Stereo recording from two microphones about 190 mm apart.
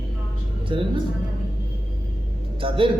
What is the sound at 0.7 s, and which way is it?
Speech, 25° right (ahead or behind).